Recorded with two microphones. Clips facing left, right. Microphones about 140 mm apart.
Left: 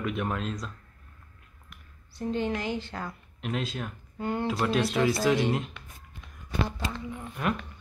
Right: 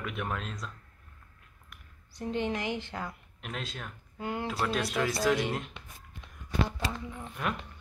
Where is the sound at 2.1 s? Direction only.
20° right (ahead or behind).